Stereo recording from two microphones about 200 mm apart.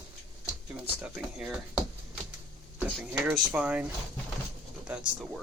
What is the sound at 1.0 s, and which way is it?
Speech, 5° right (ahead or behind).